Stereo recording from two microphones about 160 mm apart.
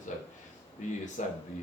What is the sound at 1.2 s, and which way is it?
Speech, 50° left (ahead or behind).